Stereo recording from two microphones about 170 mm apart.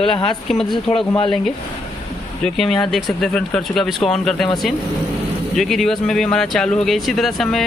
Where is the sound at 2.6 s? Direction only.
Centre (ahead or behind).